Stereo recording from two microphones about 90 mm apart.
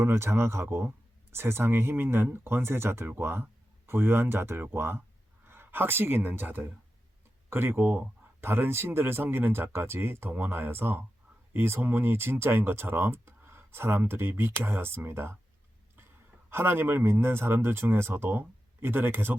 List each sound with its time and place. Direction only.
0.0 s speech: 30° right (ahead or behind)
16.5 s speech: 25° right (ahead or behind)